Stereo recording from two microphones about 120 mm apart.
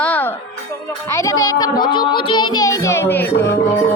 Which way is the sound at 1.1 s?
25° left (ahead or behind).